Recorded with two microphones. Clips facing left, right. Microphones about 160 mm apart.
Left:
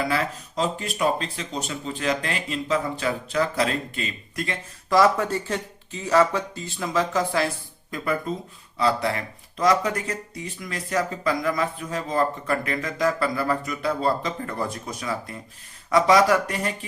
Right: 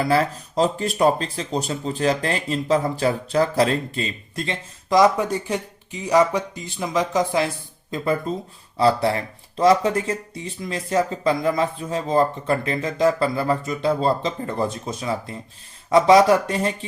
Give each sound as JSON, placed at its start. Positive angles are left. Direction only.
{"t": 0.1, "sound": "speech", "side_deg": -35}